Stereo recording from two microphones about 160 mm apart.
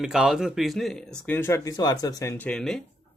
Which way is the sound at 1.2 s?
10° left (ahead or behind).